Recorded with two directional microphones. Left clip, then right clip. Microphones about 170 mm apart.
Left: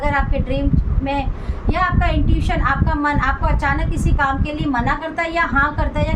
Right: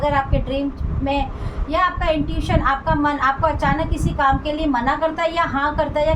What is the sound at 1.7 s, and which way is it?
A woman's voice, 35° left (ahead or behind).